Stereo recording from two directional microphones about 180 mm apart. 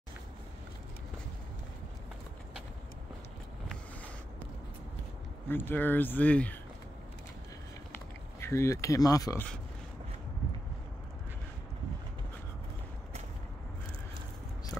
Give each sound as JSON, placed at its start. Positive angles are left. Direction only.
{"t": 5.5, "sound": "speech", "side_deg": 10}
{"t": 8.4, "sound": "speech", "side_deg": 15}
{"t": 14.7, "sound": "a sound", "side_deg": 5}